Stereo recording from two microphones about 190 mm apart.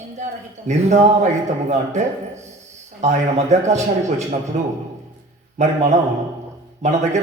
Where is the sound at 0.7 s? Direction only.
35° right (ahead or behind).